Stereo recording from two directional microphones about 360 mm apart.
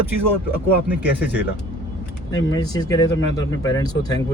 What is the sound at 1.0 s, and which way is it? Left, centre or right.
Speech, left.